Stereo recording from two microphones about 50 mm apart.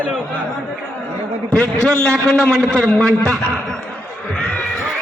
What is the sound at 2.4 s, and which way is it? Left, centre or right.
Speech, centre.